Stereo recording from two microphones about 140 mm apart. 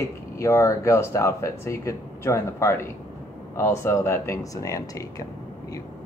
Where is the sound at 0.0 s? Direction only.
20° left (ahead or behind).